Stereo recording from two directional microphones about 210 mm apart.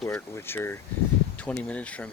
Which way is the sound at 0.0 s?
10° left (ahead or behind).